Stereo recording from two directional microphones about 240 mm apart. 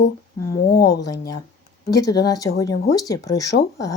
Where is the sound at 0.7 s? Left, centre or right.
Left.